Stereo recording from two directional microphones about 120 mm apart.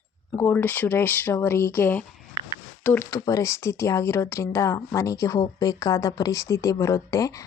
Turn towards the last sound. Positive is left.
turn(degrees=25)  # may be behind; listen again after turning